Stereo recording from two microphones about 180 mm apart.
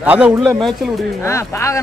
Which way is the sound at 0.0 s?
5° right (ahead or behind).